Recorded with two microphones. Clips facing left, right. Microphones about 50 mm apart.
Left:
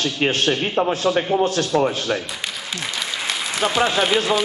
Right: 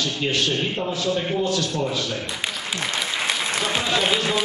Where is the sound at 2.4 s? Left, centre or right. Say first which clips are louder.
Right 1 dB; centre.